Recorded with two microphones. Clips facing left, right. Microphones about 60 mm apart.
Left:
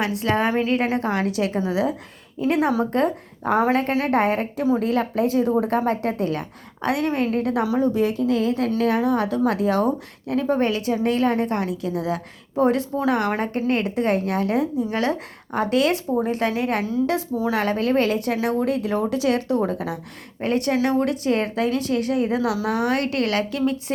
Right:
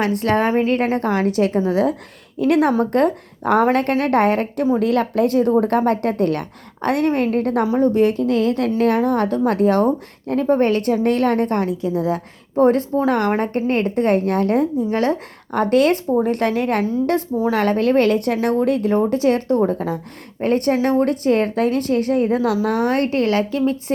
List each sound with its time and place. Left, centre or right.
0.0 s a woman's voice: right
2.4 s a woman's voice: right
11.8 s a woman's voice: right
17.3 s a woman's voice: right
17.6 s a woman's voice: right